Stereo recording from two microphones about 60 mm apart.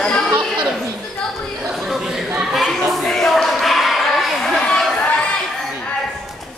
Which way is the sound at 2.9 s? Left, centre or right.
Centre.